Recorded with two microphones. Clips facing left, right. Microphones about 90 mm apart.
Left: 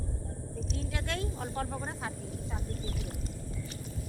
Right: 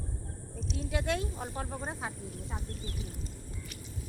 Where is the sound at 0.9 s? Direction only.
15° right (ahead or behind).